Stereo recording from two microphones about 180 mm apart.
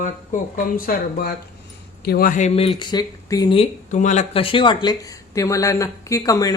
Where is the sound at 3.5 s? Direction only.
40° left (ahead or behind); by 6.5 s 20° left (ahead or behind).